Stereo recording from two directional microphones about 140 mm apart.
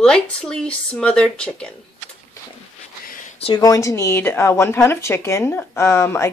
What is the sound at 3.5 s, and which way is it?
Speech, 25° left (ahead or behind).